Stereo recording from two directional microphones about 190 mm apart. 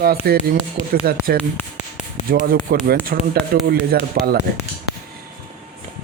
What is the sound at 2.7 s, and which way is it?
Speech, 55° right (ahead or behind).